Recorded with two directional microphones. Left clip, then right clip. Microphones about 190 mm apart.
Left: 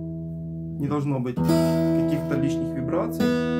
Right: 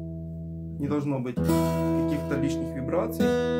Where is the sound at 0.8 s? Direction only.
10° right (ahead or behind).